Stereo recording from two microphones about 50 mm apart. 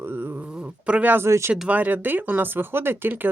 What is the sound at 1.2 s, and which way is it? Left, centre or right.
Speech, right.